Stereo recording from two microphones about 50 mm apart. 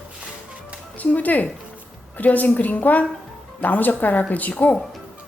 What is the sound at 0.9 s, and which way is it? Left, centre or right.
A woman's voice, left.